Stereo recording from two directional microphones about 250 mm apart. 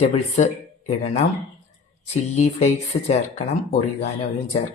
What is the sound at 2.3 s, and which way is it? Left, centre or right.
Speech, left.